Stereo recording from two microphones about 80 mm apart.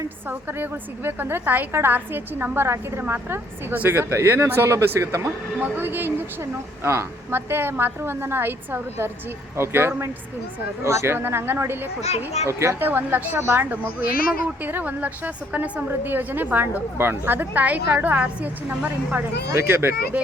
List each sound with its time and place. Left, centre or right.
0.3 s a woman's voice: right
5.5 s a woman's voice: right
12.8 s a woman's voice: right
19.5 s a woman's voice: right